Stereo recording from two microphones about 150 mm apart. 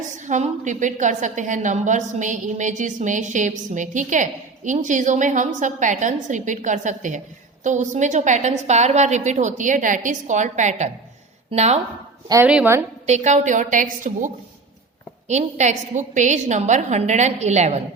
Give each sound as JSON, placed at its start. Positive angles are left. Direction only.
{"t": 0.3, "sound": "a woman's voice", "side_deg": -50}
{"t": 12.5, "sound": "a woman's voice", "side_deg": -5}
{"t": 13.1, "sound": "a woman's voice", "side_deg": -50}
{"t": 15.3, "sound": "a woman's voice", "side_deg": -50}